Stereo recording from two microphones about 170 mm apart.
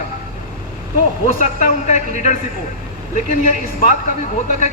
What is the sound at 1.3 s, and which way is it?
A man's voice, 50° left (ahead or behind).